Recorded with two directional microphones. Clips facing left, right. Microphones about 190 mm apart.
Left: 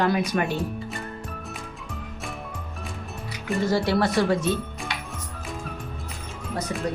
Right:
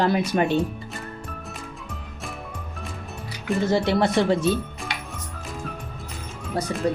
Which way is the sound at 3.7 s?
20° right (ahead or behind).